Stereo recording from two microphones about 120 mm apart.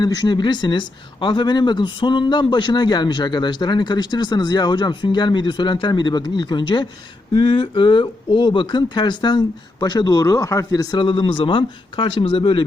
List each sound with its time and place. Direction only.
0.0 s speech: 35° left (ahead or behind)